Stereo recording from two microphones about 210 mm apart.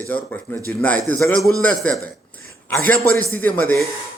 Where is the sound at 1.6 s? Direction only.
5° left (ahead or behind).